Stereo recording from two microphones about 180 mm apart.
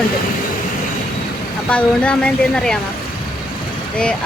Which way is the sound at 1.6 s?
5° left (ahead or behind).